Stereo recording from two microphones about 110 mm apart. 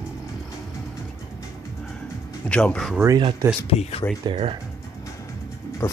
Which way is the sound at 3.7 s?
70° left (ahead or behind).